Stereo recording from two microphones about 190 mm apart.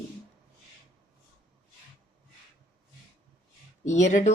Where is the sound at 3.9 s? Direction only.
40° left (ahead or behind).